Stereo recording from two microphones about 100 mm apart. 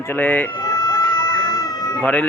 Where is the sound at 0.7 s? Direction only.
35° left (ahead or behind).